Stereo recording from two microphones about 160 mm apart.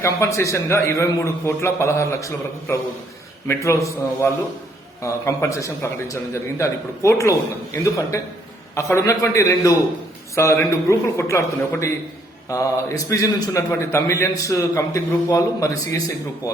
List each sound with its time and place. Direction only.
0.0 s a man's voice: 20° left (ahead or behind)
8.7 s a man's voice: 20° left (ahead or behind)